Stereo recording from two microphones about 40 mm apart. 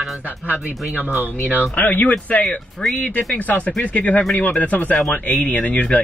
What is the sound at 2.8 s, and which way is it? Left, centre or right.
Speech, left.